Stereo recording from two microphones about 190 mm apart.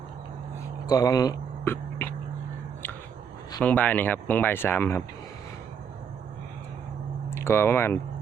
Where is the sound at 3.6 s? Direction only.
10° left (ahead or behind).